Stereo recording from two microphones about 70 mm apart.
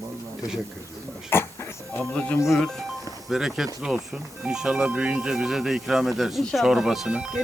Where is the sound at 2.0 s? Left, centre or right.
Left.